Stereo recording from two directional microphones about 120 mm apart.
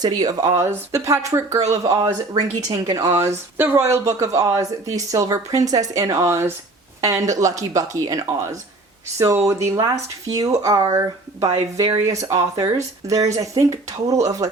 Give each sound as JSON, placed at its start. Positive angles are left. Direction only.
{"t": 0.0, "sound": "speech", "side_deg": -30}